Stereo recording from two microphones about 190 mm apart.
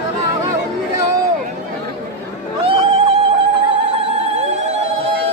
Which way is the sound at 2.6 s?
30° right (ahead or behind).